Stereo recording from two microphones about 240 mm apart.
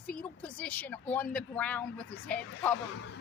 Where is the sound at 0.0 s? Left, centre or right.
Centre.